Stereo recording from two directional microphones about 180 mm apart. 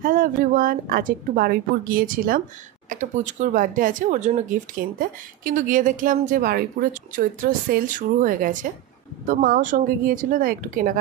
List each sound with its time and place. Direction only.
0.0 s speech: 50° right (ahead or behind)
2.9 s speech: 45° right (ahead or behind)